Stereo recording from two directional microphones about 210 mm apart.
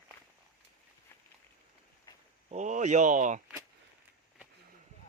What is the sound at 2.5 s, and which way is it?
Speech, 35° right (ahead or behind).